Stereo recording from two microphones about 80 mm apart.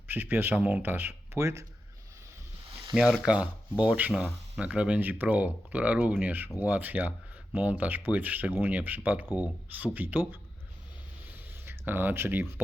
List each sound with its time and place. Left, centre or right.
0.1 s speech: right
2.9 s speech: centre
11.3 s a sound: right